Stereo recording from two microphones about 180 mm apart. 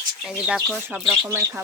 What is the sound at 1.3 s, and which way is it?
Speech, 15° right (ahead or behind).